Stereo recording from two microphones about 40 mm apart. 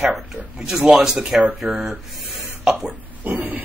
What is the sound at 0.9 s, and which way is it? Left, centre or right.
Speech, centre.